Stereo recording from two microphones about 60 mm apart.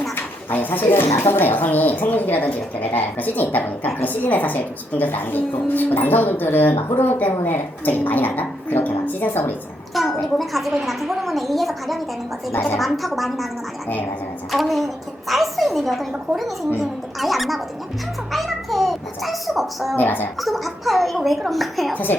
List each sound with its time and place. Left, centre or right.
0.5 s a woman's voice: left
9.9 s a woman's voice: centre
14.5 s a woman's voice: centre
18.3 s a sound: centre
20.0 s a woman's voice: left
20.4 s a woman's voice: centre
21.9 s a woman's voice: left